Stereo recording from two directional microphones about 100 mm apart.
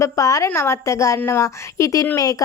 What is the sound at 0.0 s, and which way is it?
Speech, 35° left (ahead or behind).